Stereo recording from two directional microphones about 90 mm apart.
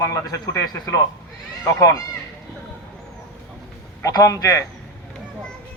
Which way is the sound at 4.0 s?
40° left (ahead or behind).